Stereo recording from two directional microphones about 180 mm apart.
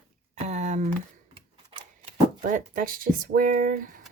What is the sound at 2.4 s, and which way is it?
Speech, 50° right (ahead or behind).